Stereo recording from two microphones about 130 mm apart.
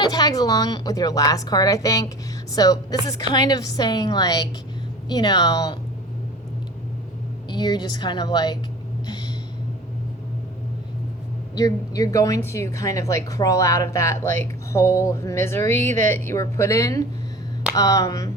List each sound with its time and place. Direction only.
0.0 s a woman's voice: 30° left (ahead or behind)
7.5 s a woman's voice: 35° left (ahead or behind)
9.0 s a sound: 35° left (ahead or behind)
11.5 s a woman's voice: 25° left (ahead or behind)